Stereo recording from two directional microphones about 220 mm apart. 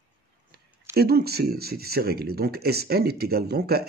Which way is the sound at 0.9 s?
45° right (ahead or behind).